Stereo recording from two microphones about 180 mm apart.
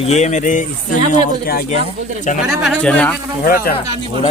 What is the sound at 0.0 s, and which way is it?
Speech, 40° left (ahead or behind).